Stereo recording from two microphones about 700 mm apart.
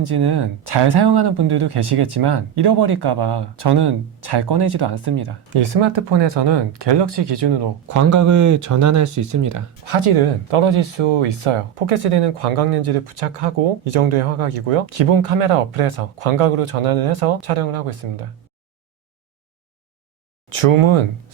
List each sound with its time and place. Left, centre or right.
0.0 s speech: right
1.8 s speech: right
10.0 s speech: right
20.5 s speech: right